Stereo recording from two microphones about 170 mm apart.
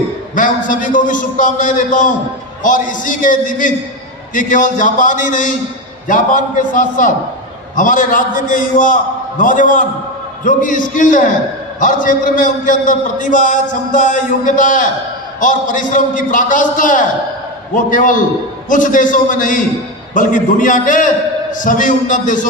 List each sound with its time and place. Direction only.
0.3 s a man's voice: 50° left (ahead or behind)